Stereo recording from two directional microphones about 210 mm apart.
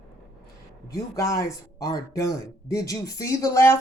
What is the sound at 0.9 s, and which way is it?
Speech, 15° left (ahead or behind).